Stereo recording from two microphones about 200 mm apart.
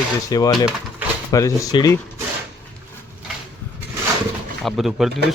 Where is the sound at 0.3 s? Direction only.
20° left (ahead or behind).